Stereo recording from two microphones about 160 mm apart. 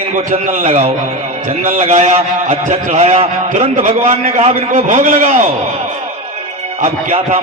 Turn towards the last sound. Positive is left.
turn(degrees=-40)  # may be behind; listen again after turning